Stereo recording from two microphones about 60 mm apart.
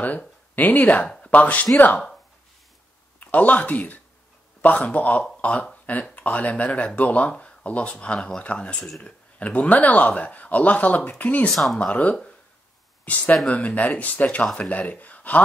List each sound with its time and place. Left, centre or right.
0.6 s a man's voice: left
3.2 s a man's voice: left
11.5 s speech: centre
11.8 s a man's voice: left